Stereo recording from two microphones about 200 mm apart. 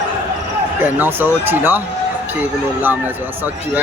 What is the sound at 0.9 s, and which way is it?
Speech, 10° right (ahead or behind).